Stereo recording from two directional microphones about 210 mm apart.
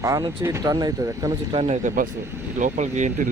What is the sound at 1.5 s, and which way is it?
Speech, 30° right (ahead or behind).